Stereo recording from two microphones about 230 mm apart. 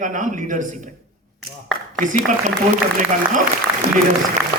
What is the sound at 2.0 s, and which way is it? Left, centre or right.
Speech, right.